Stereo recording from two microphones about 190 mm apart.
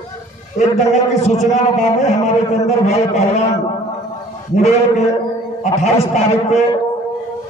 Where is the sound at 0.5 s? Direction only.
40° left (ahead or behind).